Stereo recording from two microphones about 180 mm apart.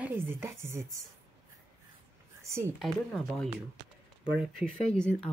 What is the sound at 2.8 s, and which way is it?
Speech, centre (ahead or behind).